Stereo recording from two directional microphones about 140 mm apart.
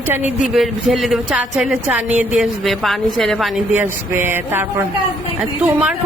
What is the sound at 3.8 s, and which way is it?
Speech, 15° right (ahead or behind).